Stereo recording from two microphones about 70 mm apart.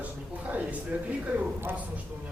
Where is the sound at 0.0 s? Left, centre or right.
Right.